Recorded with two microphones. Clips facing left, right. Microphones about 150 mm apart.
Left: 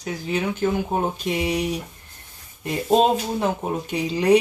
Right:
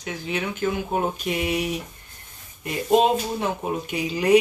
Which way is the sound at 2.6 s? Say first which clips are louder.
Left 1 dB; 35° left (ahead or behind).